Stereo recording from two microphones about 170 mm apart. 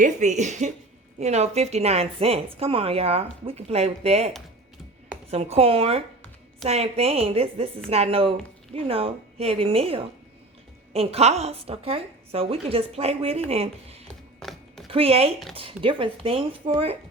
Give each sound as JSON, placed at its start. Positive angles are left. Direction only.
{"t": 0.0, "sound": "speech", "side_deg": -45}
{"t": 5.3, "sound": "speech", "side_deg": -35}
{"t": 14.3, "sound": "a sound", "side_deg": 0}
{"t": 14.8, "sound": "speech", "side_deg": -35}